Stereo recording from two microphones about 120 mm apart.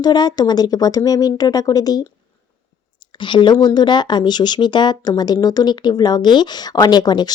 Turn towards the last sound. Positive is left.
turn(degrees=35)  # may be behind; listen again after turning